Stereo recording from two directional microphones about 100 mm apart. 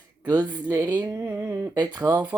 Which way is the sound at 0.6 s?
20° right (ahead or behind).